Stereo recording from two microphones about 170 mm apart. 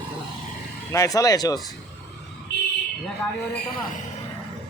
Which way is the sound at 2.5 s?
85° left.